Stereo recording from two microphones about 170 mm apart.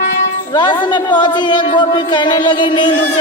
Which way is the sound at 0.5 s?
25° left (ahead or behind).